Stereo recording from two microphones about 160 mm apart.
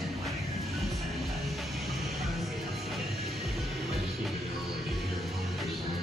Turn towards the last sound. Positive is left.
turn(degrees=0)  # may be behind; listen again after turning